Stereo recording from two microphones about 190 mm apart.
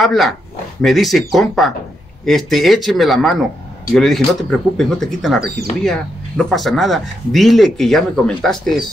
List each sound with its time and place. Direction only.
0.0 s speech: centre (ahead or behind)